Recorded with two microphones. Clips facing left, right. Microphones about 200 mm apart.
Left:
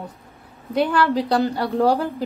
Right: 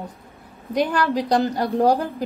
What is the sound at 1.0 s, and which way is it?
A woman's voice, 15° right (ahead or behind).